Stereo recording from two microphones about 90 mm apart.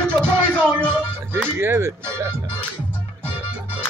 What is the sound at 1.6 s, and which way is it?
Speech, 25° right (ahead or behind).